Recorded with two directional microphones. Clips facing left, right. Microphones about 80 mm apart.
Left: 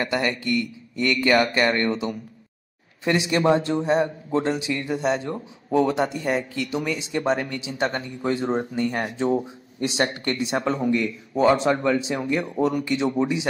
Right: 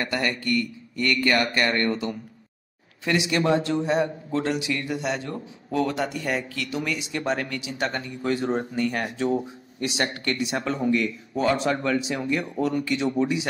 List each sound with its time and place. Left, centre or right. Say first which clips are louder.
0.0 s a man's voice: left 2 dB; left